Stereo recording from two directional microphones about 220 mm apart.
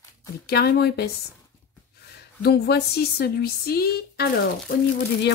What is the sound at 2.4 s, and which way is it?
Speech, 45° left (ahead or behind).